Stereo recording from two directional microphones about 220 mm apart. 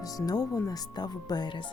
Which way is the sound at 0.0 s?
15° left (ahead or behind).